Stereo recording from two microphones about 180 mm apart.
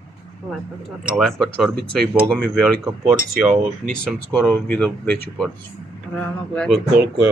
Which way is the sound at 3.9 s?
5° left (ahead or behind).